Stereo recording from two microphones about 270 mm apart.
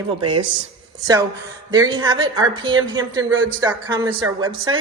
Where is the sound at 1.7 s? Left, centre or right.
Centre.